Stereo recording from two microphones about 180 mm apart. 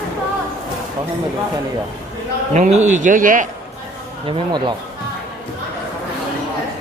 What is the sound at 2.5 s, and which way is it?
Speech, 40° right (ahead or behind).